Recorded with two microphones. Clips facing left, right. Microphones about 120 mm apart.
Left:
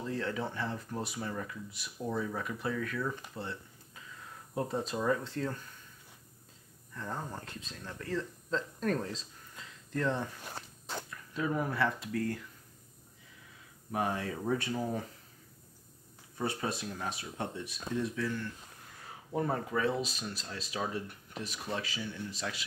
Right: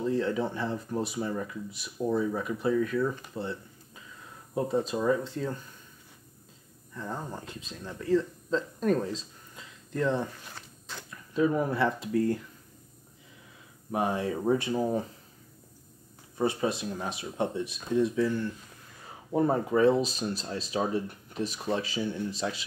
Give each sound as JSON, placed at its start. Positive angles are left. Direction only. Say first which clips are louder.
{"t": 0.0, "sound": "speech", "louder": "right 7 dB", "side_deg": -20}
{"t": 6.9, "sound": "speech", "louder": "right 3 dB", "side_deg": -15}
{"t": 10.5, "sound": "walk", "louder": "left 3 dB", "side_deg": 45}
{"t": 11.3, "sound": "speech", "louder": "right 6 dB", "side_deg": -25}
{"t": 13.9, "sound": "speech", "louder": "right 5 dB", "side_deg": -20}
{"t": 16.3, "sound": "speech", "louder": "right 7 dB", "side_deg": -20}